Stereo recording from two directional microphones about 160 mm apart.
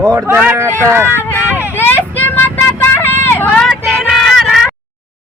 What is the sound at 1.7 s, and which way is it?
Vehicle, 15° left (ahead or behind).